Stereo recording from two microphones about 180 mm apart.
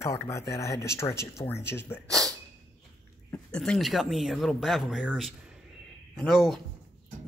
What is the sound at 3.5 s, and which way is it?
Speech, 5° left (ahead or behind).